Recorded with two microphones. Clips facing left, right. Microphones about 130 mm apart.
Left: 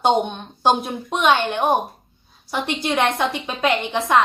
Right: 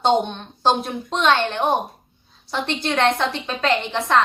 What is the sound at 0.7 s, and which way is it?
Speech, centre (ahead or behind).